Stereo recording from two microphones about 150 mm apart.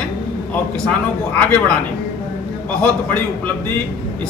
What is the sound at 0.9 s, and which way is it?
Speech, 10° left (ahead or behind).